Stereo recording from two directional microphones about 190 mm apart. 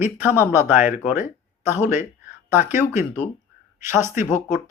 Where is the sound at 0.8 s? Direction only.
40° left (ahead or behind).